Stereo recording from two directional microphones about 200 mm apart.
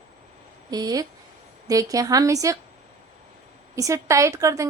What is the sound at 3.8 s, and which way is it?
Speech, 15° right (ahead or behind).